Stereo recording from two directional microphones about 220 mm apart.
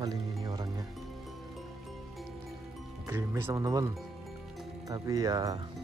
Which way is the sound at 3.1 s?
10° right (ahead or behind).